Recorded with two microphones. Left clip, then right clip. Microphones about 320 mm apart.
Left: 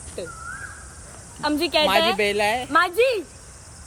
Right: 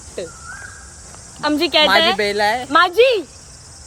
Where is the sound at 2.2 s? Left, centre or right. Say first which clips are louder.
Right 4 dB; centre.